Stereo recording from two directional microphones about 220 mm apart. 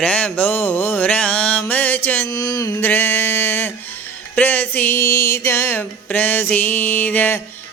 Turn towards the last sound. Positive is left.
turn(degrees=10)  # may be behind; listen again after turning